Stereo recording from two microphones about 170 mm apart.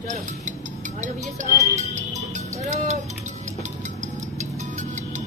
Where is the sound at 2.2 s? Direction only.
45° right (ahead or behind).